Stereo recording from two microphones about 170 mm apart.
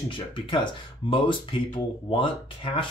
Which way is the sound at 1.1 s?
30° left (ahead or behind).